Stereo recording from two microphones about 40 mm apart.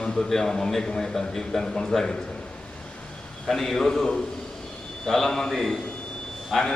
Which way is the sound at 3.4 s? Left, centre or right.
Centre.